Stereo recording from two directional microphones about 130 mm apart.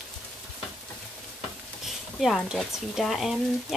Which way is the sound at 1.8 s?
Centre (ahead or behind).